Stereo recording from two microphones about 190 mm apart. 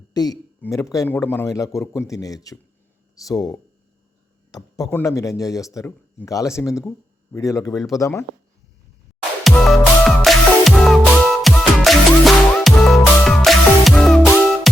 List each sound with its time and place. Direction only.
0.1 s speech: 20° left (ahead or behind)
9.4 s music: centre (ahead or behind)